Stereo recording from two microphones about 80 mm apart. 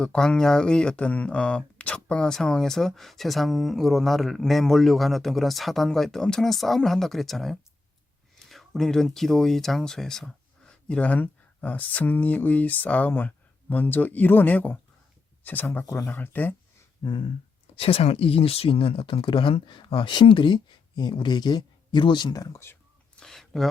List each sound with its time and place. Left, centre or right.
0.0 s speech: centre
17.0 s a sound: left
18.8 s speech: left
22.5 s speech: left
23.2 s speech: centre